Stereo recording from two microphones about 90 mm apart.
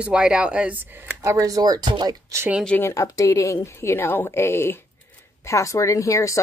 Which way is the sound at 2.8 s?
35° left (ahead or behind).